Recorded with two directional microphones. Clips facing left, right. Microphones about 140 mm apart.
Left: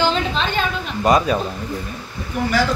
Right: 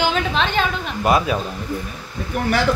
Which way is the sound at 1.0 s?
5° right (ahead or behind).